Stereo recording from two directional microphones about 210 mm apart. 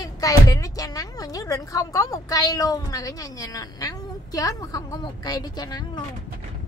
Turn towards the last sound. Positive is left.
turn(degrees=20)  # may be behind; listen again after turning